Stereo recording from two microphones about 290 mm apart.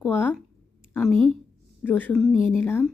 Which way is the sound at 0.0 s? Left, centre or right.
Centre.